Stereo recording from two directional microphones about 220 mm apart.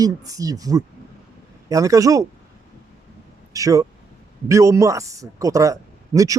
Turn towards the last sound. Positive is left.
turn(degrees=-15)  # may be behind; listen again after turning